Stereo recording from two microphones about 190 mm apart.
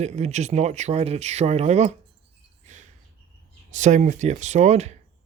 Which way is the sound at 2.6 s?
40° right (ahead or behind).